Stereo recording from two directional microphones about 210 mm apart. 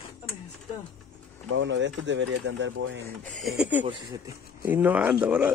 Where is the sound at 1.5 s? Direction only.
60° right (ahead or behind).